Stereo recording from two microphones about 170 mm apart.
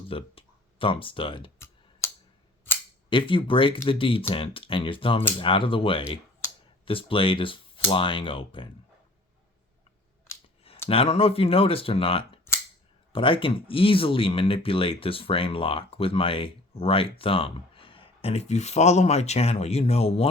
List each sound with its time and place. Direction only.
0.1 s speech: 30° left (ahead or behind)
1.5 s clicking: 15° left (ahead or behind)
3.1 s speech: 30° left (ahead or behind)
10.8 s speech: 35° left (ahead or behind)